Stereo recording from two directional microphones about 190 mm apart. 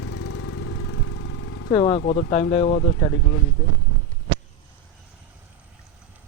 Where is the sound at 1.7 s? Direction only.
25° left (ahead or behind).